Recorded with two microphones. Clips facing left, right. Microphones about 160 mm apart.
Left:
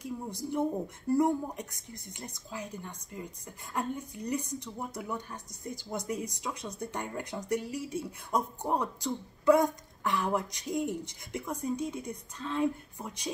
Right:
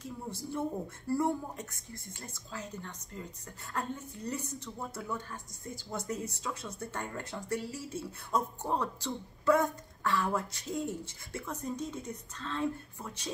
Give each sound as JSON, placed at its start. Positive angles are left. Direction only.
{"t": 0.0, "sound": "a woman's voice", "side_deg": 15}